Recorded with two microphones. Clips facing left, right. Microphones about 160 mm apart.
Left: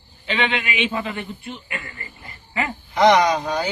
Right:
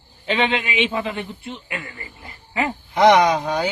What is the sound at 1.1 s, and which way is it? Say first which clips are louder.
Speech: right 1 dB; 20° right (ahead or behind).